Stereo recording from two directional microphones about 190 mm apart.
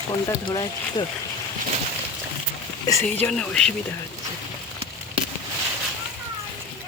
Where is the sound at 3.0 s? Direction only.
5° left (ahead or behind).